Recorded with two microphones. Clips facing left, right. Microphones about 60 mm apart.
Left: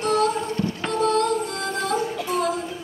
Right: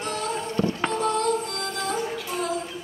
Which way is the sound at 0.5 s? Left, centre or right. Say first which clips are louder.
Even; right.